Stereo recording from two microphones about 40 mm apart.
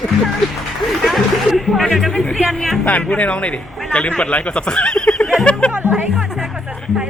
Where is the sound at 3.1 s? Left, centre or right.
Left.